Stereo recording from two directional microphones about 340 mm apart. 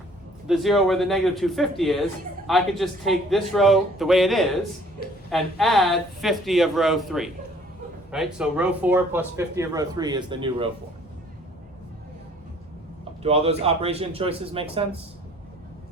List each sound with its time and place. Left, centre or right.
0.4 s speech: centre
13.2 s speech: centre